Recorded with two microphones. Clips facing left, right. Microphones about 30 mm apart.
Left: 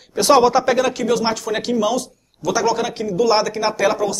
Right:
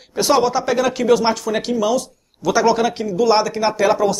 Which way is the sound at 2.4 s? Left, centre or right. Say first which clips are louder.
Right 3 dB; centre.